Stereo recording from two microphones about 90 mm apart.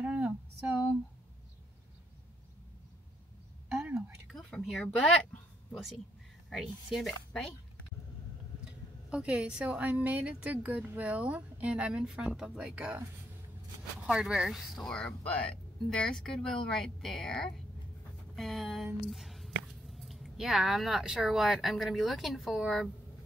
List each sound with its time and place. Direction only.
0.0 s a sound: 15° right (ahead or behind)
4.3 s speech: 5° left (ahead or behind)
6.5 s speech: centre (ahead or behind)
9.1 s a woman's voice: 15° right (ahead or behind)
14.0 s speech: 5° right (ahead or behind)